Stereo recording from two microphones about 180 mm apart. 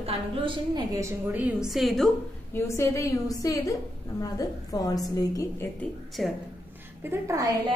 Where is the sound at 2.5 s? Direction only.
15° left (ahead or behind).